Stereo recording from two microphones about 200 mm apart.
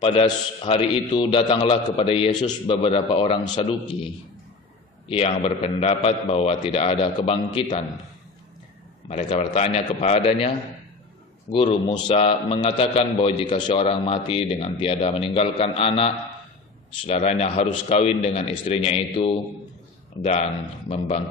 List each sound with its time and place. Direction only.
0.0 s a man's voice: 25° left (ahead or behind)
9.1 s a man's voice: 30° left (ahead or behind)
11.5 s a man's voice: 30° left (ahead or behind)